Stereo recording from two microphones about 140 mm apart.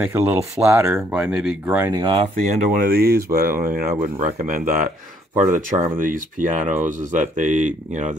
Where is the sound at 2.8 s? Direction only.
90° right.